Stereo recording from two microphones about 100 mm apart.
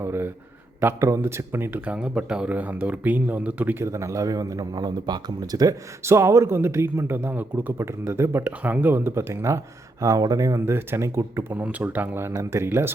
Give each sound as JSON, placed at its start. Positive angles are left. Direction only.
{"t": 0.0, "sound": "a man's voice", "side_deg": -25}
{"t": 2.0, "sound": "speech", "side_deg": -10}
{"t": 11.5, "sound": "speech", "side_deg": -15}